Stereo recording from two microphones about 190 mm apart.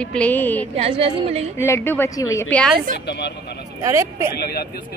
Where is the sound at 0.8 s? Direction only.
30° right (ahead or behind).